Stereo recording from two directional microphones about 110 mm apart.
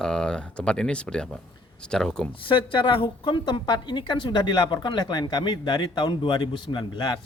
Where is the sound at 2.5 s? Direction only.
50° left (ahead or behind).